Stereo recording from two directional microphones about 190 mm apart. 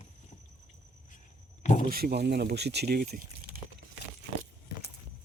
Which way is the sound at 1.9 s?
55° right (ahead or behind).